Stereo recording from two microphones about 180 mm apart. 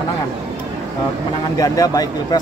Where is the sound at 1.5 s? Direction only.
20° left (ahead or behind).